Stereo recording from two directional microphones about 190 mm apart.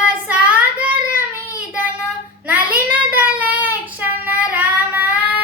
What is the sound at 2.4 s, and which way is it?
Child singing, 10° right (ahead or behind).